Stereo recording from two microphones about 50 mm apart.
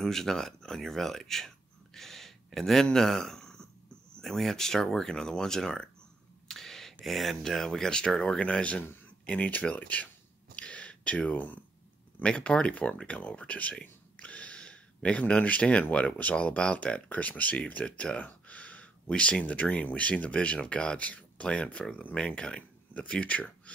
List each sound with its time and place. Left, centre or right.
0.0 s speech: centre; by 10.0 s left
10.5 s a sound: left
11.3 s speech: left
12.2 s speech: left
13.3 s whispering: left
16.1 s speech: left